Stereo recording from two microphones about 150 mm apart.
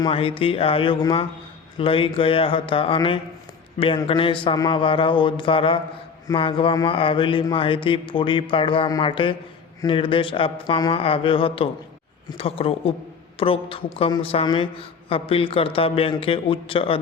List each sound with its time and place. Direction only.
0.0 s a man's voice: 35° left (ahead or behind)